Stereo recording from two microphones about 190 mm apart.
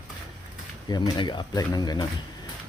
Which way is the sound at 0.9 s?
25° left (ahead or behind).